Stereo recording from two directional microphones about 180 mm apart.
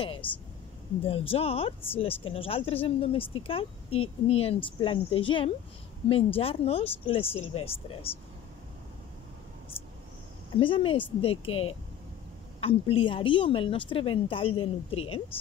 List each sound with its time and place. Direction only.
0.0 s a woman's voice: 30° left (ahead or behind)
1.3 s speech: 30° left (ahead or behind)
10.6 s a woman's voice: 30° left (ahead or behind)